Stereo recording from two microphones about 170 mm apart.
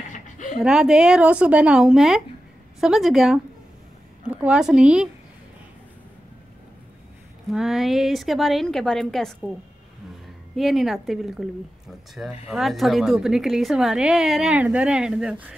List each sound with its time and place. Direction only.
0.1 s a sound: 50° left (ahead or behind)
0.6 s a woman's voice: 5° right (ahead or behind)
7.5 s a woman's voice: centre (ahead or behind)
10.5 s a woman's voice: centre (ahead or behind)
12.4 s a woman's voice: centre (ahead or behind)